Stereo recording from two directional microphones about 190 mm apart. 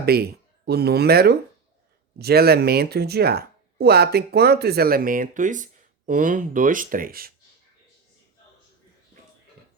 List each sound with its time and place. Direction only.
0.0 s speech: 55° right (ahead or behind)